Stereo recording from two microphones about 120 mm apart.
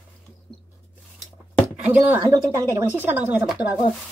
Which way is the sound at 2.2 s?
25° right (ahead or behind).